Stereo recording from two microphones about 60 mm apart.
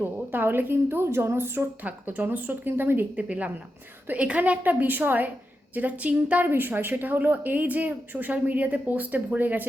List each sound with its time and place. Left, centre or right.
0.0 s a woman's voice: right
1.8 s a woman's voice: right
3.2 s speech: right
6.5 s a woman's voice: right